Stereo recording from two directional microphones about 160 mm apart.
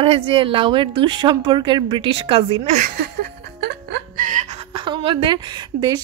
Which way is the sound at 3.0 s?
90° right.